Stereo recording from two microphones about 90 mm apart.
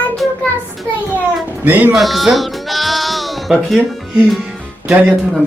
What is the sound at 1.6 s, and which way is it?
Speech, 20° right (ahead or behind).